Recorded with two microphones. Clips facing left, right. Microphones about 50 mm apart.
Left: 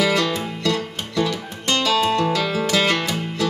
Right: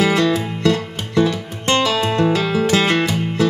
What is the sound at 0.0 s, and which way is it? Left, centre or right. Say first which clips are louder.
Music: right 4 dB; right.